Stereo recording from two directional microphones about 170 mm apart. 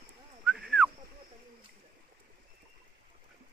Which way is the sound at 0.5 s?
5° right (ahead or behind).